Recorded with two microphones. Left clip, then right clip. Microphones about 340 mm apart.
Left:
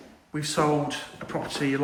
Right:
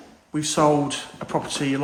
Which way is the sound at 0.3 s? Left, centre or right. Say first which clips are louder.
Right 5 dB; centre.